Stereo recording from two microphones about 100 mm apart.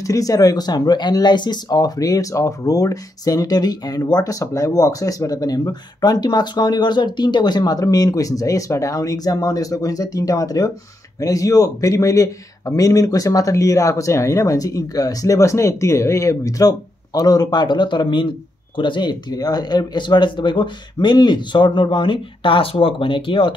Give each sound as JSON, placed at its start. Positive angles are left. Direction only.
{"t": 0.0, "sound": "speech", "side_deg": 35}